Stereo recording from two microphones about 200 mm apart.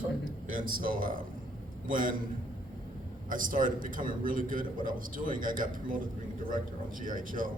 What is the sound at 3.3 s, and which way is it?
A man's voice, 40° right (ahead or behind).